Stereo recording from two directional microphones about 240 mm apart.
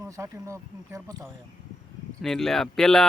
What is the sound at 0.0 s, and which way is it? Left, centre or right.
Speech, centre.